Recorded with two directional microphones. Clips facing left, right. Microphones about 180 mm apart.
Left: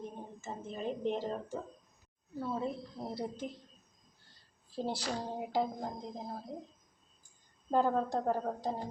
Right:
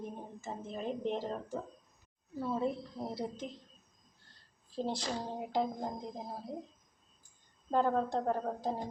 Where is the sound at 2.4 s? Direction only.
5° right (ahead or behind).